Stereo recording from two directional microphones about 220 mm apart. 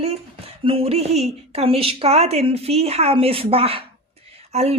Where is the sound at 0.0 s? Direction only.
25° right (ahead or behind).